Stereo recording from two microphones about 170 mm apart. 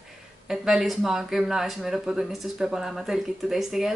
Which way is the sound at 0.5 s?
Centre (ahead or behind).